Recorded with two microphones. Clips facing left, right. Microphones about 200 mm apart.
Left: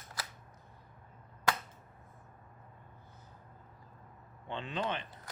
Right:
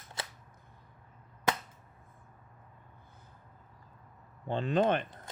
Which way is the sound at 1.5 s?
20° right (ahead or behind).